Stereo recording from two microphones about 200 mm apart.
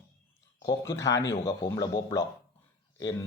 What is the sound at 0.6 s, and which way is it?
Speech, 15° left (ahead or behind).